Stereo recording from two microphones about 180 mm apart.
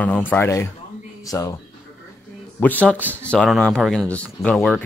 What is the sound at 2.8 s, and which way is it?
Speech, 5° left (ahead or behind).